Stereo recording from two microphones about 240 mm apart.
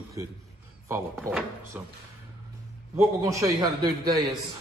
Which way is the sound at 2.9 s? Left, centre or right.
Centre.